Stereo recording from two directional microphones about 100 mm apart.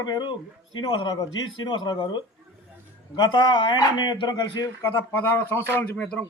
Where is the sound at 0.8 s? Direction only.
60° left (ahead or behind).